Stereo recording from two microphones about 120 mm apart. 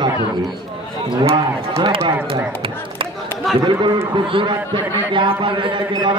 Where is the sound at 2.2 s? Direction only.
50° right (ahead or behind).